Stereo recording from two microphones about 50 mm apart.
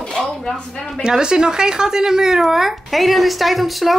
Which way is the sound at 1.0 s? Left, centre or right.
Centre.